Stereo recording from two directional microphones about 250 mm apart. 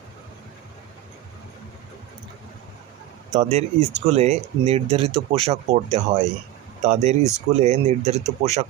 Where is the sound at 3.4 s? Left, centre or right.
Right.